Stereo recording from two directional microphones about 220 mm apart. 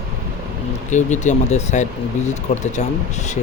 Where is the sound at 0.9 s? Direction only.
35° left (ahead or behind).